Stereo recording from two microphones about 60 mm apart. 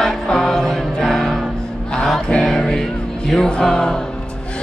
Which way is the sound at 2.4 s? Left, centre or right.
Centre.